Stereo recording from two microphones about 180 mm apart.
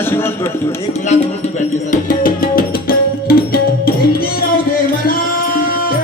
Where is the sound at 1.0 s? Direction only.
40° left (ahead or behind); by 4.4 s 55° left (ahead or behind).